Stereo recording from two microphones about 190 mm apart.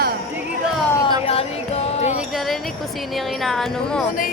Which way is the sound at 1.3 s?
30° left (ahead or behind).